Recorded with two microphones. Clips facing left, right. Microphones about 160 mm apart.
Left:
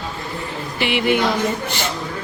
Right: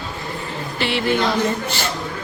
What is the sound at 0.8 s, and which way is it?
Speech, 15° left (ahead or behind).